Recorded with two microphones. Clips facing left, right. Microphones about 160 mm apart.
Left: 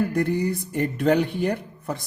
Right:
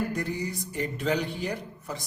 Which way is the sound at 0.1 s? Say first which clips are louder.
Left 8 dB; 60° left (ahead or behind).